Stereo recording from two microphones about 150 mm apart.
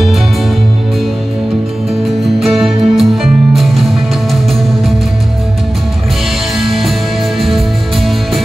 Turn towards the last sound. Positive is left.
turn(degrees=0)  # may be behind; listen again after turning